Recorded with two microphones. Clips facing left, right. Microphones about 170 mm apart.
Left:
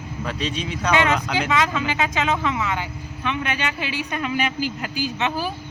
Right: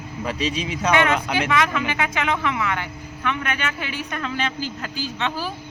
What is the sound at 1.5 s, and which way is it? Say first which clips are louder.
Speech: left 1 dB; 20° left (ahead or behind).